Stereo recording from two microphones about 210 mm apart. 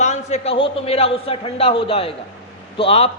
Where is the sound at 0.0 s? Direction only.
35° left (ahead or behind).